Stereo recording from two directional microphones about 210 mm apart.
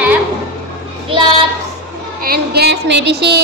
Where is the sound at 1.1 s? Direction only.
25° right (ahead or behind).